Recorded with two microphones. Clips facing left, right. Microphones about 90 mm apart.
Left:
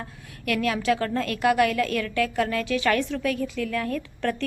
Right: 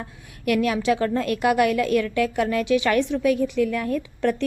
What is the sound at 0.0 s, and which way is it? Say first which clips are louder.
A woman's voice: right 6 dB; 20° right (ahead or behind).